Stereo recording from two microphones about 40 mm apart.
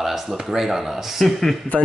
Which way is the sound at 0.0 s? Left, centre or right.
Centre.